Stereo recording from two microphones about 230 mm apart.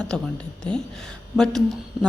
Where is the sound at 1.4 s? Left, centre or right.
Centre.